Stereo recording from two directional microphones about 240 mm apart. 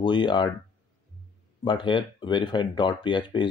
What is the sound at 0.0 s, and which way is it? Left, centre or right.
Speech, centre.